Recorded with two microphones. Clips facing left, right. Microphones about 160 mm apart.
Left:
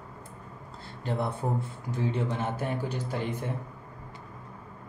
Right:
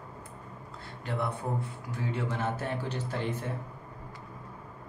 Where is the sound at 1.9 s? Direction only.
15° left (ahead or behind).